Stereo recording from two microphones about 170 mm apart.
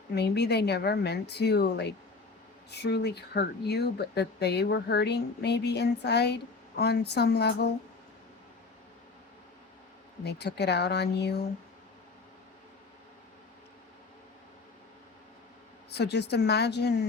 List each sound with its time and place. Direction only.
0.1 s speech: 75° left (ahead or behind)
10.2 s speech: 75° left (ahead or behind)
15.9 s speech: 80° left